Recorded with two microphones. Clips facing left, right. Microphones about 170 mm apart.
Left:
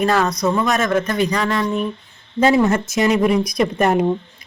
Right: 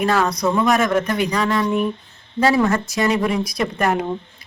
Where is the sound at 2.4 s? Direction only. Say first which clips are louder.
Left 2 dB; 20° left (ahead or behind).